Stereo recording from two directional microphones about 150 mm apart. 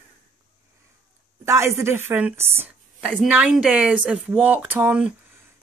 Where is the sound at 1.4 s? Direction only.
20° right (ahead or behind).